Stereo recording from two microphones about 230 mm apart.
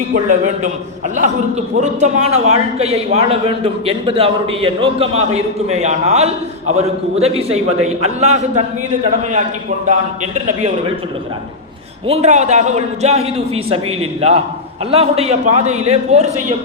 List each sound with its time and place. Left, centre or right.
0.1 s a man's voice: right
1.8 s a man's voice: right
9.8 s a man's voice: right
12.0 s a man's voice: right